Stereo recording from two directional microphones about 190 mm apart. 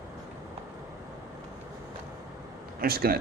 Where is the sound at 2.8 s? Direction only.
50° right (ahead or behind).